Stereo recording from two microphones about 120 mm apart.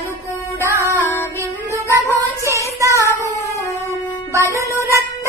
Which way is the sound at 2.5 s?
25° right (ahead or behind).